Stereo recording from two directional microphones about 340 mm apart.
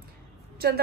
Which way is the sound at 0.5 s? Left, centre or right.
Right.